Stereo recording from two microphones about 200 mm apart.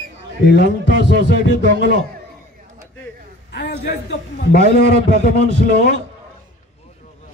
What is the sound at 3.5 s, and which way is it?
A man's voice, 55° left (ahead or behind).